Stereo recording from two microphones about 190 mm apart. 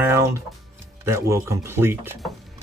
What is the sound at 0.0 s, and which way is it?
Music, 15° right (ahead or behind).